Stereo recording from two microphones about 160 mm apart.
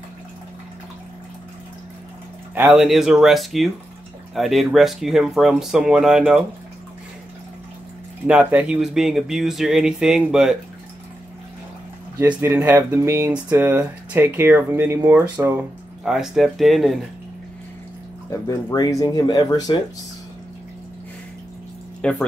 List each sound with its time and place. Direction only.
2.5 s speech: 10° right (ahead or behind)
8.3 s speech: 10° right (ahead or behind)
12.4 s speech: 15° right (ahead or behind)
18.5 s speech: 20° left (ahead or behind)
22.0 s speech: 5° left (ahead or behind)